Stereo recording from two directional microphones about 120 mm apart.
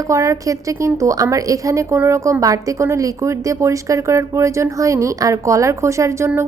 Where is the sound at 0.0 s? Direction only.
25° right (ahead or behind).